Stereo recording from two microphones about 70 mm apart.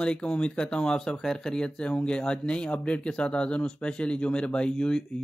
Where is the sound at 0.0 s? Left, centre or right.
Centre.